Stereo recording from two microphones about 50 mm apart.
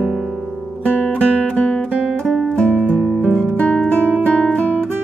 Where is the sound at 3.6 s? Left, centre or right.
Left.